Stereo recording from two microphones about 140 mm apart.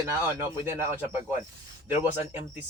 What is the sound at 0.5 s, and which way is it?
Speech, 15° right (ahead or behind).